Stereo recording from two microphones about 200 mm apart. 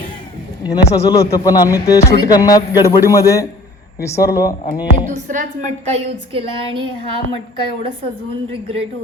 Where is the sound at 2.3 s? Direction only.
20° left (ahead or behind).